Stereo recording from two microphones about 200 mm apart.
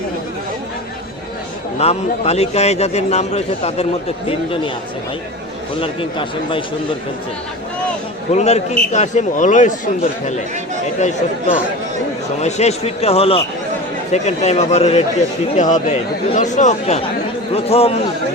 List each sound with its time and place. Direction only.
1.8 s a man's voice: 30° left (ahead or behind)
5.8 s speech: 25° left (ahead or behind)
8.3 s a man's voice: 35° left (ahead or behind)
12.4 s a man's voice: 35° left (ahead or behind)